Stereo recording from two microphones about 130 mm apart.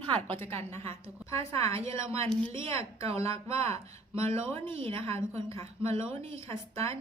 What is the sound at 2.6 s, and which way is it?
Speech, 50° right (ahead or behind).